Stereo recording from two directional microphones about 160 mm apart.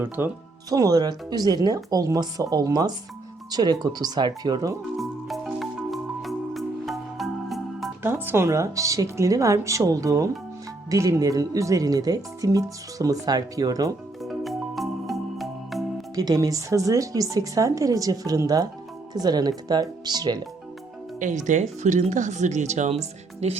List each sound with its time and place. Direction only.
0.2 s speech: 15° right (ahead or behind)
4.9 s marimba: centre (ahead or behind)
8.0 s speech: 15° right (ahead or behind)
14.2 s music: centre (ahead or behind)
16.1 s speech: 25° right (ahead or behind)
21.2 s speech: 50° right (ahead or behind)